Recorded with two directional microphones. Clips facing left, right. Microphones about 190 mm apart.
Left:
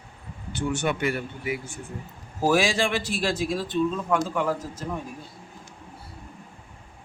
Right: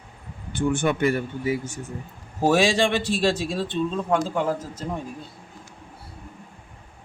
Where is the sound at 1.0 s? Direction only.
40° right (ahead or behind).